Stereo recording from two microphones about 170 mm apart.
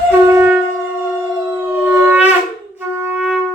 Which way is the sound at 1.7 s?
10° right (ahead or behind).